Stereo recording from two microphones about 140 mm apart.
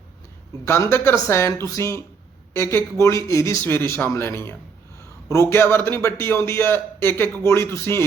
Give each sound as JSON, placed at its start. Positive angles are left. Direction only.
{"t": 0.6, "sound": "a man's voice", "side_deg": 20}